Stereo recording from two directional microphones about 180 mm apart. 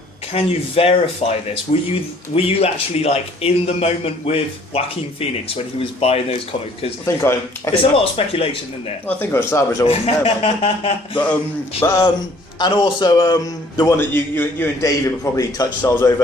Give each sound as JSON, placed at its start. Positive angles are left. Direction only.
{"t": 0.3, "sound": "speech", "side_deg": 35}
{"t": 5.8, "sound": "speech", "side_deg": 30}
{"t": 7.0, "sound": "speech", "side_deg": 15}
{"t": 7.8, "sound": "speech", "side_deg": 30}
{"t": 9.0, "sound": "speech", "side_deg": 10}
{"t": 9.8, "sound": "speech", "side_deg": 30}
{"t": 11.8, "sound": "speech", "side_deg": 15}
{"t": 12.5, "sound": "a man's voice", "side_deg": 25}